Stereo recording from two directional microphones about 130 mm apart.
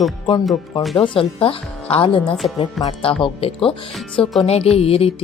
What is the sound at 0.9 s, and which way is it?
A woman's voice, 45° left (ahead or behind).